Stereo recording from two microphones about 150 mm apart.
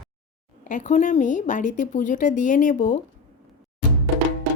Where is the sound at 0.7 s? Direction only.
55° left (ahead or behind).